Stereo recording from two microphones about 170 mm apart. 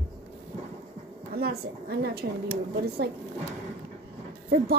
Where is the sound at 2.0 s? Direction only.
65° right (ahead or behind).